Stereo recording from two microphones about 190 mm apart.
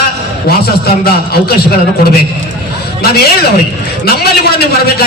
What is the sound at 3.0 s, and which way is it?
A man's voice, 55° left (ahead or behind).